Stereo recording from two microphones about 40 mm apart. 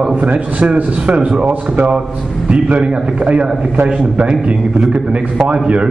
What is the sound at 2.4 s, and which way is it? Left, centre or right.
A man's voice, right.